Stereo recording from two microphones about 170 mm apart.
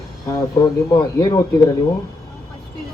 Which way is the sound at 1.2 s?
25° left (ahead or behind).